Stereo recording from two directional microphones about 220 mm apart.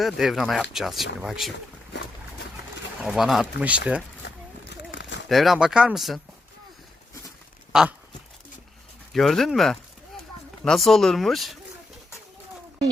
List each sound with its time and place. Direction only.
0.0 s speech: centre (ahead or behind)
3.0 s speech: centre (ahead or behind)
4.9 s a sound: 55° left (ahead or behind)
5.3 s speech: centre (ahead or behind)
7.7 s a sound: 5° right (ahead or behind)
9.1 s speech: centre (ahead or behind)